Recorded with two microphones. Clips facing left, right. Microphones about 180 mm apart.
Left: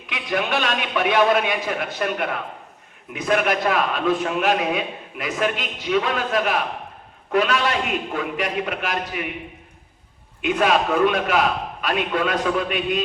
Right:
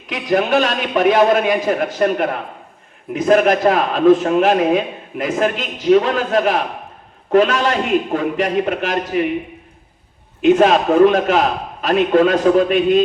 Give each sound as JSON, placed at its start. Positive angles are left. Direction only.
{"t": 0.1, "sound": "a man's voice", "side_deg": -40}
{"t": 10.4, "sound": "a man's voice", "side_deg": -45}